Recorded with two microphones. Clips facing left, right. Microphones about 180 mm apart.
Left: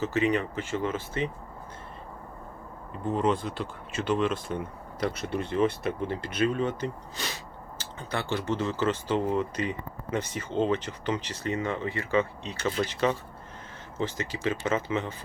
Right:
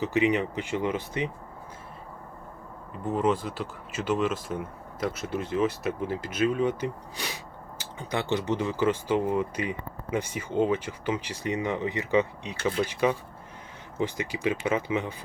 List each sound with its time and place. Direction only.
0.0 s speech: 15° right (ahead or behind)
2.9 s speech: 5° right (ahead or behind)